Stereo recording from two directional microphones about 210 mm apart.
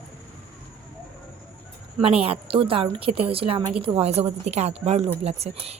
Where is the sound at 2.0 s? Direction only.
30° right (ahead or behind).